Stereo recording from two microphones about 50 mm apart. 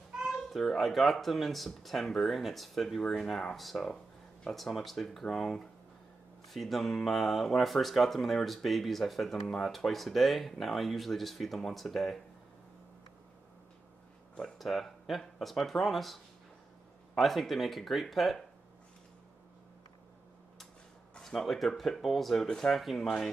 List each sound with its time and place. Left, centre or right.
0.1 s a sound: centre
0.5 s speech: centre
14.6 s speech: centre
17.2 s speech: centre
21.2 s speech: centre